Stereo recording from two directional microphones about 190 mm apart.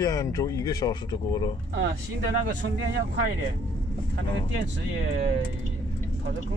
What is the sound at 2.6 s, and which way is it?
Speech, 75° right (ahead or behind).